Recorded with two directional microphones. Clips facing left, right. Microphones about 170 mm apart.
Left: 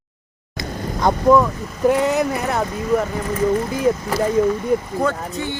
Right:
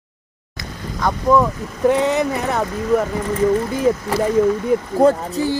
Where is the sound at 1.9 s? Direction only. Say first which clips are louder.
Right 1 dB; 5° left (ahead or behind).